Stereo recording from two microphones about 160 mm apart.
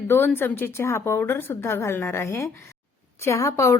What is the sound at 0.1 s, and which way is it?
A woman's voice, 15° left (ahead or behind).